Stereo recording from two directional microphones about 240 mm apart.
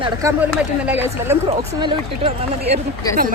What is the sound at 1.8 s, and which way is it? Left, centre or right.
Speech, right.